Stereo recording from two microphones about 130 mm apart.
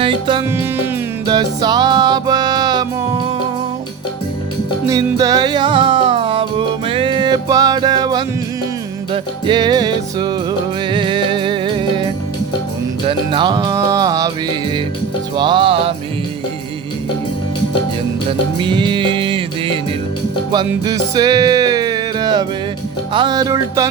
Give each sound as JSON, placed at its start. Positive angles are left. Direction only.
{"t": 0.0, "sound": "music", "side_deg": -40}
{"t": 4.9, "sound": "music", "side_deg": -25}
{"t": 13.1, "sound": "music", "side_deg": -40}
{"t": 15.4, "sound": "music", "side_deg": -35}
{"t": 18.6, "sound": "music", "side_deg": -35}
{"t": 20.8, "sound": "music", "side_deg": -30}